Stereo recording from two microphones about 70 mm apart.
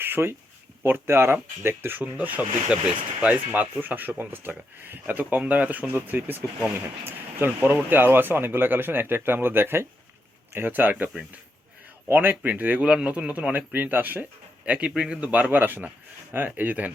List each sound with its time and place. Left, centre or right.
0.0 s a sound: right
0.9 s speech: right
12.1 s speech: right
12.8 s speech: centre
14.6 s speech: centre